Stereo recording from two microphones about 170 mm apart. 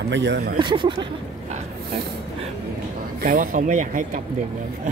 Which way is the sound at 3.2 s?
50° right (ahead or behind).